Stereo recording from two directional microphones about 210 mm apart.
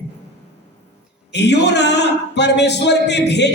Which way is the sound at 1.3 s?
55° left (ahead or behind).